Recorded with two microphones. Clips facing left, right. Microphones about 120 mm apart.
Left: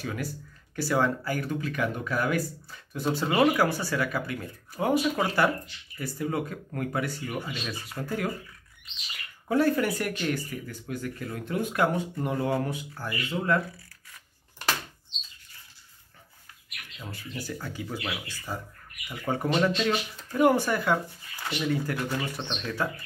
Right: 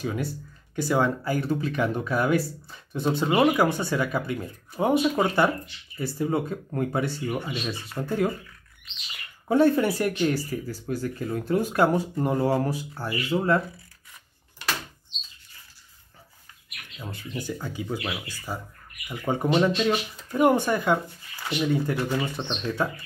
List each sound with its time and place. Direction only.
0.0 s speech: 20° right (ahead or behind)
9.5 s speech: 25° right (ahead or behind)
17.0 s speech: 20° right (ahead or behind)